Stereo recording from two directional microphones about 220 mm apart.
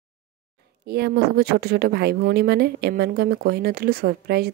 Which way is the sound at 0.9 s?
45° right (ahead or behind).